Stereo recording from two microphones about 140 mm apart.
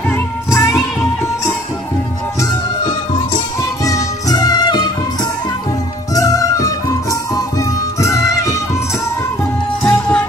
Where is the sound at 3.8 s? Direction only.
25° left (ahead or behind).